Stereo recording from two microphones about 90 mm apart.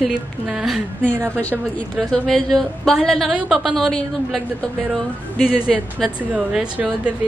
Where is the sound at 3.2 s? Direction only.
5° right (ahead or behind).